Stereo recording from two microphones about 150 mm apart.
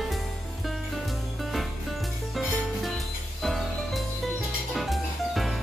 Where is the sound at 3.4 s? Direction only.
Centre (ahead or behind).